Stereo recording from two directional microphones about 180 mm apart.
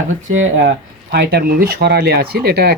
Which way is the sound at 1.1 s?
60° right (ahead or behind).